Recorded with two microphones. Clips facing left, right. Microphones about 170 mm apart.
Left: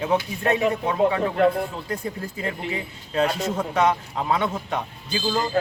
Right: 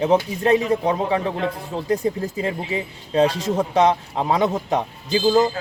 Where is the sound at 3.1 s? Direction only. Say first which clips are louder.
Right 4 dB; 30° right (ahead or behind).